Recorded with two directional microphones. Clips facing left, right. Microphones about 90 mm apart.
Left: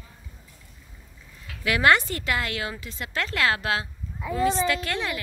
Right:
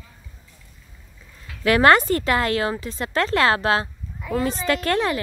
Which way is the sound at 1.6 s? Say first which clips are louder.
Right 5 dB; 45° right (ahead or behind).